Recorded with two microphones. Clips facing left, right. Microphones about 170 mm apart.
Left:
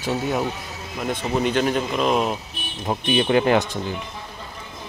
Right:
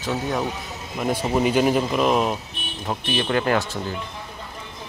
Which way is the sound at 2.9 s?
15° left (ahead or behind).